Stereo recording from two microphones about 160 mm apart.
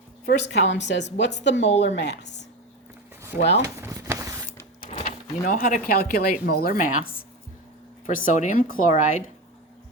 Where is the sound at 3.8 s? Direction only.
20° right (ahead or behind).